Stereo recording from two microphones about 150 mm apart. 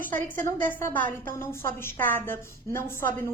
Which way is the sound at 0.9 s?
65° right (ahead or behind).